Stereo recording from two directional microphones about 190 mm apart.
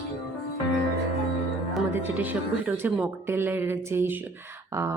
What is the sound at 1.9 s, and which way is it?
Speech, 10° right (ahead or behind).